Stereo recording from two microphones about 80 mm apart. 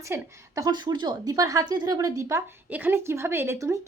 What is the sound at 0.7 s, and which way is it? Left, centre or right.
A woman's voice, right.